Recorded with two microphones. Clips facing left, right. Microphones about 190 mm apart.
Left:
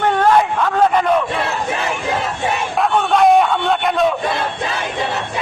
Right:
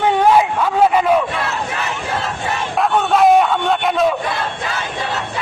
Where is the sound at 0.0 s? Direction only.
10° right (ahead or behind).